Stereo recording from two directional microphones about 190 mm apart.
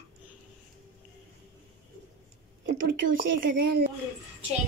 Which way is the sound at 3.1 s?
50° right (ahead or behind).